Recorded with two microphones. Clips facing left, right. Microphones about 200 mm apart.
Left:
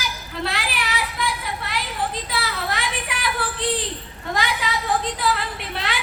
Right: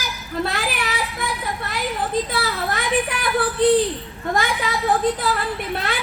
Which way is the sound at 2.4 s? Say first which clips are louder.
Right 3 dB; 50° right (ahead or behind).